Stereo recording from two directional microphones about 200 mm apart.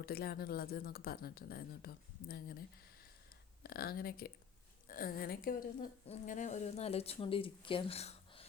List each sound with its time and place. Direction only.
0.0 s speech: 50° left (ahead or behind)
6.1 s speech: 40° left (ahead or behind)